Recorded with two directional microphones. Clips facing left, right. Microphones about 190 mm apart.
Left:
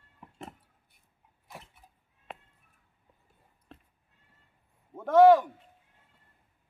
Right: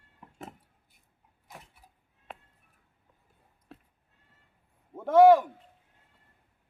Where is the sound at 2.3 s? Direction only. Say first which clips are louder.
Left 1 dB; centre (ahead or behind).